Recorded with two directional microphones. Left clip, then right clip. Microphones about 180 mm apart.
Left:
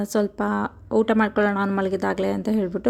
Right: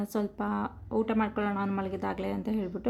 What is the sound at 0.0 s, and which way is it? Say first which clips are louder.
A woman's voice: left 9 dB; 30° left (ahead or behind).